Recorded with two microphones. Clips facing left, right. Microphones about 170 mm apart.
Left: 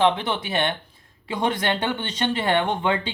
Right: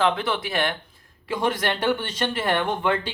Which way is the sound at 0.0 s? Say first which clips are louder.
Left 2 dB; 20° left (ahead or behind).